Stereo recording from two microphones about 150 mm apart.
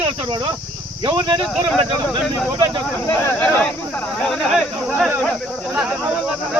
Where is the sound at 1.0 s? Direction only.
30° right (ahead or behind).